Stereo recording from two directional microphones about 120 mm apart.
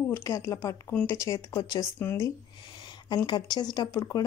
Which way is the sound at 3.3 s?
35° left (ahead or behind).